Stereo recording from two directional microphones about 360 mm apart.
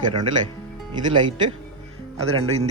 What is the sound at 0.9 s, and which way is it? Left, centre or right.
Speech, centre.